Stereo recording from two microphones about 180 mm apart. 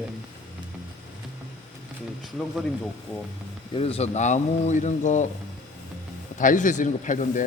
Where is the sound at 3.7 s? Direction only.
35° left (ahead or behind).